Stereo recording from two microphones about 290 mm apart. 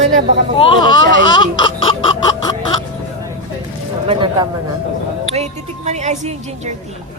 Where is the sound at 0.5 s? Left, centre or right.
Centre.